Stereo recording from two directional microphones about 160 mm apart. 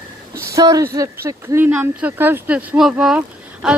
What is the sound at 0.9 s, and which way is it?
Speech, 20° right (ahead or behind).